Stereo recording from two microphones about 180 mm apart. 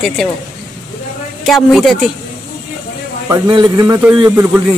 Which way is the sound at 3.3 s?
20° right (ahead or behind).